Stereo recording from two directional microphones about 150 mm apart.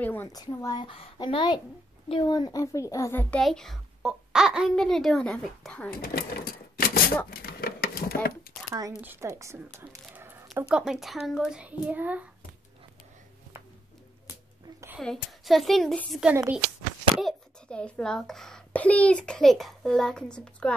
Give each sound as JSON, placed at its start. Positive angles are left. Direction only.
{"t": 0.0, "sound": "a child's voice", "side_deg": 15}
{"t": 0.3, "sound": "a child's voice", "side_deg": 25}
{"t": 5.9, "sound": "speech", "side_deg": 85}
{"t": 7.2, "sound": "a sound", "side_deg": 90}
{"t": 9.0, "sound": "a woman's voice", "side_deg": -15}
{"t": 9.8, "sound": "a sound", "side_deg": -15}
{"t": 10.7, "sound": "a child's voice", "side_deg": -5}
{"t": 15.0, "sound": "a child's voice", "side_deg": 0}